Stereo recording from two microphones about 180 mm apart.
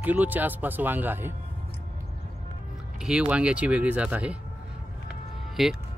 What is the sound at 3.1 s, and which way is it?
Speech, 5° right (ahead or behind).